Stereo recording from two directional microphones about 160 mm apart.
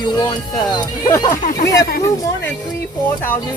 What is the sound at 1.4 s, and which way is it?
Speech, 50° left (ahead or behind).